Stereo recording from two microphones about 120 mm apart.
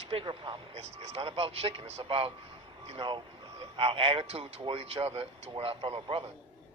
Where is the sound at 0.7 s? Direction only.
60° right (ahead or behind).